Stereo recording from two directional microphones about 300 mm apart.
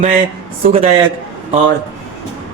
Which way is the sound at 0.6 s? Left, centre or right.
Centre.